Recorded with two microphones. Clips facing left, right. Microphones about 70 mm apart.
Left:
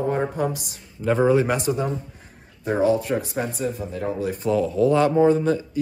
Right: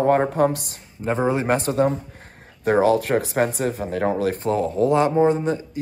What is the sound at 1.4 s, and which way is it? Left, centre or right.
Speech, right.